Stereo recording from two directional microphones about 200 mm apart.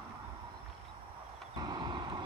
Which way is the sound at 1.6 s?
20° right (ahead or behind).